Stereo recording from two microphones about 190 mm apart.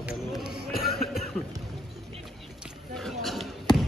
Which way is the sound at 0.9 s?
55° left (ahead or behind).